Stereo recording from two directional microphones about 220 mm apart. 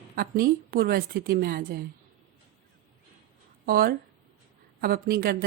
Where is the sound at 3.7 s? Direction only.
40° right (ahead or behind).